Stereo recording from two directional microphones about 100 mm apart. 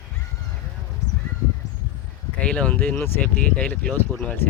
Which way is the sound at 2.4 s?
10° left (ahead or behind).